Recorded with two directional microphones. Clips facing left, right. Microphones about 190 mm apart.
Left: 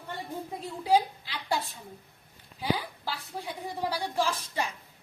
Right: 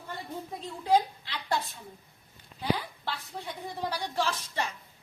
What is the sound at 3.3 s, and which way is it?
A woman's voice, 5° left (ahead or behind).